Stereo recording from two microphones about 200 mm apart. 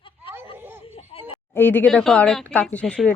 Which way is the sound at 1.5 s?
10° left (ahead or behind).